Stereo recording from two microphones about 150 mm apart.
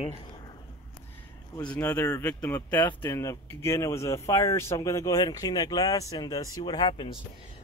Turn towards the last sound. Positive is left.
turn(degrees=30)  # may be behind; listen again after turning